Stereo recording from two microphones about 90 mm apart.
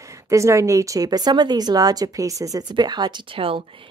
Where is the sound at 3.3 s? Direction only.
85° right.